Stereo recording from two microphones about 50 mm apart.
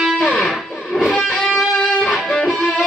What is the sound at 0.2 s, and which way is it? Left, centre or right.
Guitar, centre.